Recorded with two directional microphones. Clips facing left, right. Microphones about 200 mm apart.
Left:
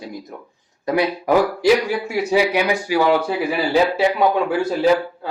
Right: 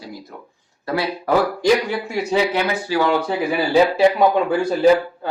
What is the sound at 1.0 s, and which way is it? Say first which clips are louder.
A man's voice: left 2 dB; 10° left (ahead or behind).